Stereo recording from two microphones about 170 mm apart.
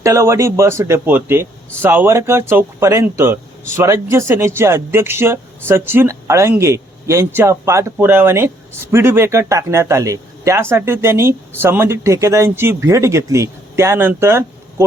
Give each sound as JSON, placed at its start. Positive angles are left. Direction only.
{"t": 0.0, "sound": "a man's voice", "side_deg": -15}